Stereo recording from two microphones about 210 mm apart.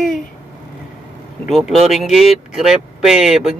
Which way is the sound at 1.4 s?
Centre (ahead or behind).